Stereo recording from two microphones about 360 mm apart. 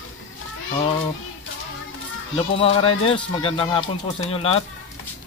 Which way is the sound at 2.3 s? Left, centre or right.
Centre.